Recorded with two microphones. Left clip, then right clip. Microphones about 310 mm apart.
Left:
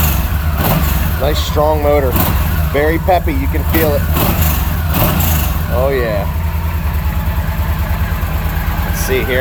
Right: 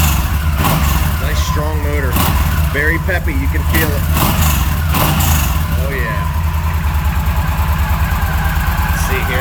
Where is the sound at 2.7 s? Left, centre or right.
Centre.